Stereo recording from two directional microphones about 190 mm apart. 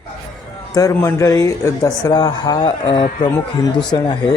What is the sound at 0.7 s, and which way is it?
A man's voice, 15° left (ahead or behind).